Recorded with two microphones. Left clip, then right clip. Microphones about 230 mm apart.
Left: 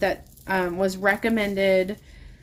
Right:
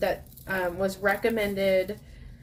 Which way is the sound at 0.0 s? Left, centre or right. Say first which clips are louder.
Left 3 dB; left.